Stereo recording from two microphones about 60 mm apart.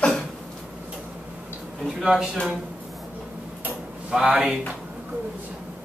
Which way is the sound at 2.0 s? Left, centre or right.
Centre.